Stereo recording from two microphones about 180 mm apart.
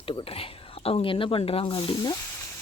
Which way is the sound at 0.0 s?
30° left (ahead or behind).